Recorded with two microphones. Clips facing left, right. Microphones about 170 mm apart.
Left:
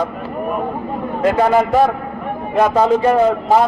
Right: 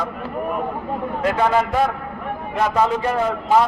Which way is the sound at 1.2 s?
40° left (ahead or behind).